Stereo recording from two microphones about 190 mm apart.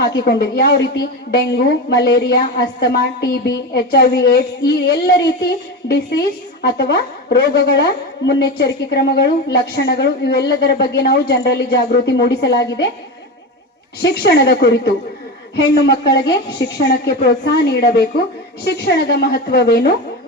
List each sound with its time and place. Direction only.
0.0 s a woman's voice: 55° left (ahead or behind)
14.1 s a woman's voice: 55° left (ahead or behind)